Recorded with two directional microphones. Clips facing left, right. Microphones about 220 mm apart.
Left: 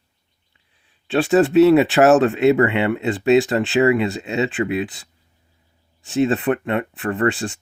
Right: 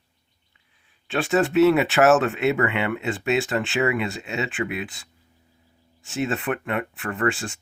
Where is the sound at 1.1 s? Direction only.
35° left (ahead or behind).